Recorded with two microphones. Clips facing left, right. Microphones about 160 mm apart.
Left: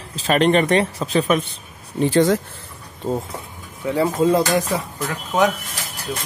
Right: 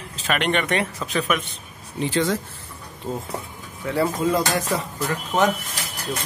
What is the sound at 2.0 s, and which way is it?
Speech, 45° left (ahead or behind).